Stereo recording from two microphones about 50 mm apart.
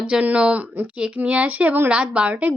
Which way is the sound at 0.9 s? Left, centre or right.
Right.